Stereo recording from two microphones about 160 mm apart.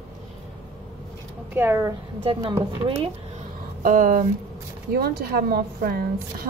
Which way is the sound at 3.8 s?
60° right (ahead or behind).